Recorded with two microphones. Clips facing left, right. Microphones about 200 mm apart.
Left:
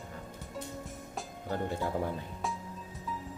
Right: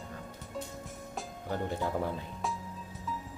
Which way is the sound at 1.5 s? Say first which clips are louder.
Even; 15° left (ahead or behind).